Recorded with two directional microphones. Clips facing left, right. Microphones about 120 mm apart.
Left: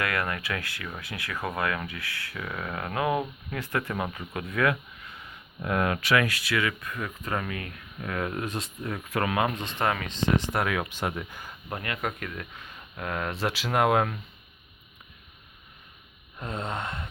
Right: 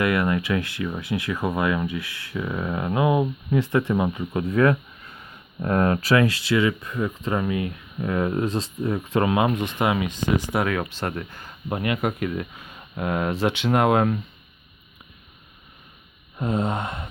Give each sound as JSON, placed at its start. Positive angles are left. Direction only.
{"t": 0.0, "sound": "speech", "side_deg": -20}
{"t": 4.4, "sound": "speech", "side_deg": -35}
{"t": 10.8, "sound": "speech", "side_deg": 15}
{"t": 11.7, "sound": "speech", "side_deg": -15}
{"t": 13.3, "sound": "speech", "side_deg": 0}
{"t": 16.4, "sound": "speech", "side_deg": -15}